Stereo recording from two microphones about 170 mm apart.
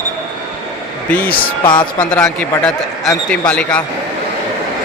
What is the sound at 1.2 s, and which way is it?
Speech, 60° left (ahead or behind).